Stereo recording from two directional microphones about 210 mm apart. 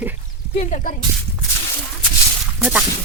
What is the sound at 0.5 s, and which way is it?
Speech, 35° left (ahead or behind).